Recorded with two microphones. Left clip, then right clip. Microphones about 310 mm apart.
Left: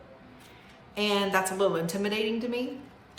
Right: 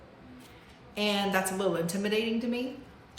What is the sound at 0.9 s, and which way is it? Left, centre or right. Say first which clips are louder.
Speech: left 2 dB; centre.